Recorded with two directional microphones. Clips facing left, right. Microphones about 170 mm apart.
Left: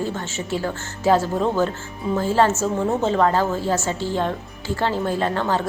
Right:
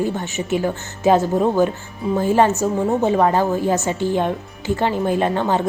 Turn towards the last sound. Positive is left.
turn(degrees=-15)  # may be behind; listen again after turning